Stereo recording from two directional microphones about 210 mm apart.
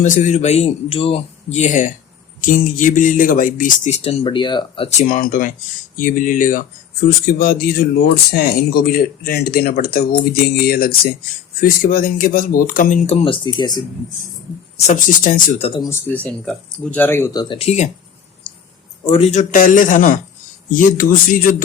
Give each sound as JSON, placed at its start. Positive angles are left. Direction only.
{"t": 0.0, "sound": "speech", "side_deg": 35}
{"t": 14.8, "sound": "speech", "side_deg": 35}
{"t": 18.5, "sound": "clicking", "side_deg": 25}
{"t": 19.0, "sound": "speech", "side_deg": 30}